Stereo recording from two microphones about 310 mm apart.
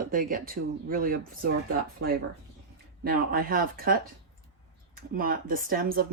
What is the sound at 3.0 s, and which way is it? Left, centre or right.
Speech, right.